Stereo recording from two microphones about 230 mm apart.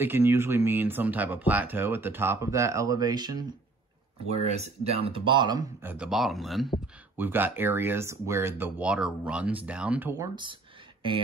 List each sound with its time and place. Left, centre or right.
0.0 s speech: centre
4.5 s speech: right